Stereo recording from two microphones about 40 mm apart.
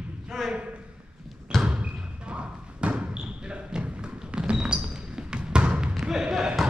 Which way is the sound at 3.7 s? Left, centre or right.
Right.